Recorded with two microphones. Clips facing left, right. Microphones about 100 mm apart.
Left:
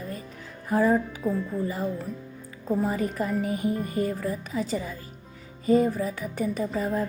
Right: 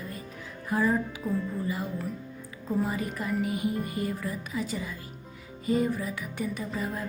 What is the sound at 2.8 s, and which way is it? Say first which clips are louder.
A woman's voice: left 4 dB; 40° left (ahead or behind).